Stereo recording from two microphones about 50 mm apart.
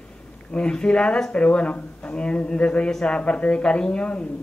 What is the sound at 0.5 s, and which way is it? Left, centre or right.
Speech, centre.